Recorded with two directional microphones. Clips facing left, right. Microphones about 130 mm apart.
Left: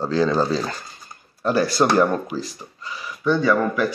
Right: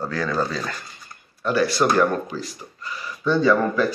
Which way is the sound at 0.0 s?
25° left (ahead or behind).